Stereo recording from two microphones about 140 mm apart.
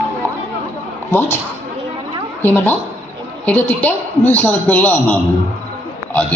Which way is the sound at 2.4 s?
15° left (ahead or behind).